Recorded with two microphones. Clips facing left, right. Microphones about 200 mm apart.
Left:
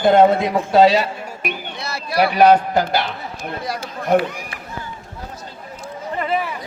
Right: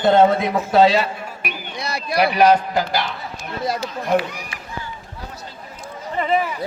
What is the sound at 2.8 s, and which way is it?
Speech, 55° left (ahead or behind).